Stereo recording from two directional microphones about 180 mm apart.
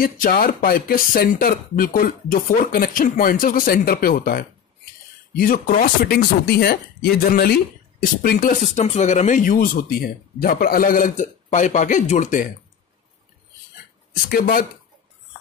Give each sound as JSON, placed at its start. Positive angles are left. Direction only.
{"t": 0.0, "sound": "speech", "side_deg": 50}
{"t": 8.7, "sound": "speech", "side_deg": 40}
{"t": 14.3, "sound": "speech", "side_deg": 55}